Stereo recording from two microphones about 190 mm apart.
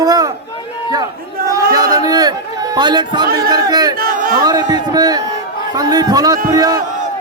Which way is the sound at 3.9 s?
50° right (ahead or behind).